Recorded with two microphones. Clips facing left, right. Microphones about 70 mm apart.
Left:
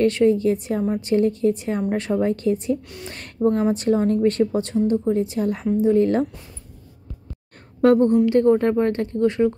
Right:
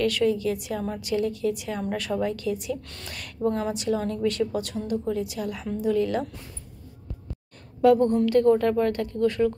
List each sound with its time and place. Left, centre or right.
0.0 s a woman's voice: left
3.7 s a woman's voice: left
8.3 s speech: left